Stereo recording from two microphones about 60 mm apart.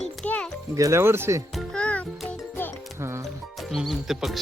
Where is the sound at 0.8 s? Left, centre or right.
Right.